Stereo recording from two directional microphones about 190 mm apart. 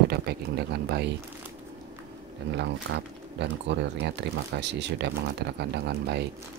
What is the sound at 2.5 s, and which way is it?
Speech, 65° right (ahead or behind).